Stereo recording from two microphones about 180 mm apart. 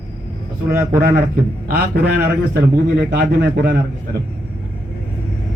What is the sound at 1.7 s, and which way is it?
A man's voice, 65° right (ahead or behind).